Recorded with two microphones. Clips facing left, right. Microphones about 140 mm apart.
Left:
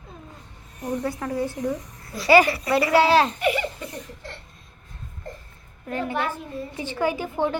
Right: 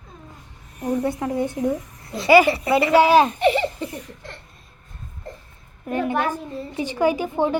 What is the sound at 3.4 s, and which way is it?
Baby laughter, 30° right (ahead or behind).